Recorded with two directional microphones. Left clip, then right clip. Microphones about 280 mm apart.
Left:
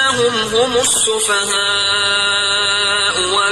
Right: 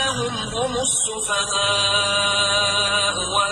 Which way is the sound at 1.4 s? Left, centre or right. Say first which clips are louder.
Left 4 dB; left.